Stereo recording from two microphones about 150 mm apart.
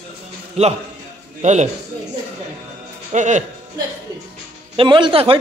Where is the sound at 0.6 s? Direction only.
45° right (ahead or behind).